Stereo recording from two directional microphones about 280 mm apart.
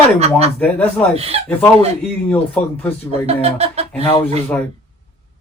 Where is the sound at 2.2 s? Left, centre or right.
Centre.